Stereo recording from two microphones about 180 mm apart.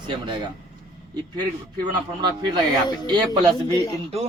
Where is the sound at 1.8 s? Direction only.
25° right (ahead or behind).